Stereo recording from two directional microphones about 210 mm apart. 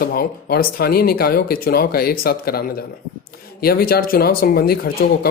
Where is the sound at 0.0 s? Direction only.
45° left (ahead or behind).